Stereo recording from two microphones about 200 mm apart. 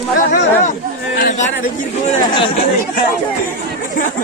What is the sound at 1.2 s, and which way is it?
Chatter, 45° left (ahead or behind).